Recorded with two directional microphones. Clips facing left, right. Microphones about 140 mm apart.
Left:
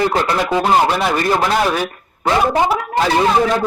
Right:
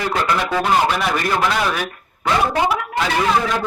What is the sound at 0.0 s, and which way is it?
Speech, 30° left (ahead or behind).